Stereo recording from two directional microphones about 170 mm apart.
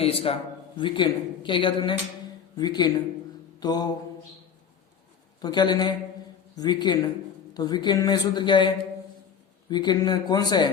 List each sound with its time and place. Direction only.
0.0 s a man's voice: 35° left (ahead or behind)
5.4 s speech: 25° left (ahead or behind)